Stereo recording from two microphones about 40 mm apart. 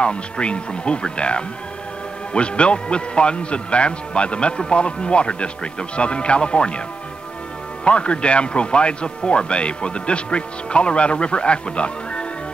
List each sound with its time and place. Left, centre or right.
0.0 s a man's voice: left
7.8 s a man's voice: left